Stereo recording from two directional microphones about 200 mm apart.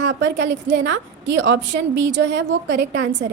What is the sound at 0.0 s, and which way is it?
A woman's voice, 60° right (ahead or behind).